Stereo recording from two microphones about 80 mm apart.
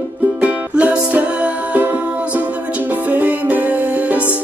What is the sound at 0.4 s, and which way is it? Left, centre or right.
Music, centre.